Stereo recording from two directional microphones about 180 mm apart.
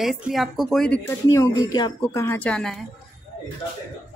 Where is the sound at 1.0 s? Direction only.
15° left (ahead or behind).